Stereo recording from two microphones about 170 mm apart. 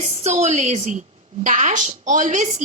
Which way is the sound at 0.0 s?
40° right (ahead or behind).